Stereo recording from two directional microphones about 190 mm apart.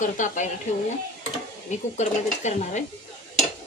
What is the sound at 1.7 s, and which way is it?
A woman's voice, 40° left (ahead or behind).